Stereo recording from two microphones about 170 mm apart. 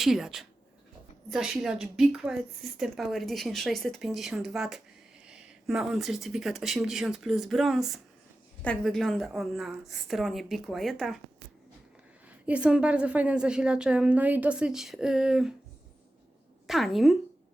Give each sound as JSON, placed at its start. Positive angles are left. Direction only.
{"t": 0.0, "sound": "a woman's voice", "side_deg": 0}
{"t": 12.5, "sound": "a woman's voice", "side_deg": -5}
{"t": 16.6, "sound": "a woman's voice", "side_deg": 0}